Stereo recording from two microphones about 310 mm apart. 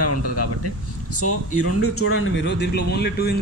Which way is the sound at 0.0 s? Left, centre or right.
Left.